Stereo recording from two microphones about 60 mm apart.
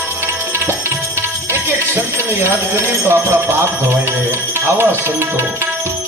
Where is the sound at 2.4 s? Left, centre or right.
Right.